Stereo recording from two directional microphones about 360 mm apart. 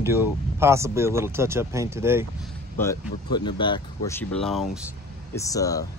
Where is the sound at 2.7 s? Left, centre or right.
Centre.